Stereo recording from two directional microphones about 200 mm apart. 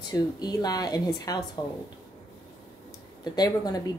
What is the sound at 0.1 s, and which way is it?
A woman's voice, 20° left (ahead or behind).